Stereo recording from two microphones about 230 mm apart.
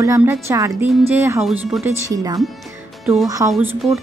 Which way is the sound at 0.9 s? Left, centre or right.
Centre.